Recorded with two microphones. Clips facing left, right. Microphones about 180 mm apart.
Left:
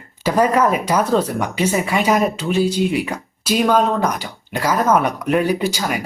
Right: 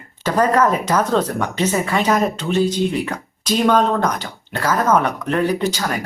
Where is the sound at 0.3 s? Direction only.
10° left (ahead or behind).